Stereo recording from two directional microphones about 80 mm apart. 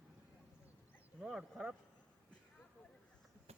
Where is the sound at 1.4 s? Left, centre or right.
Centre.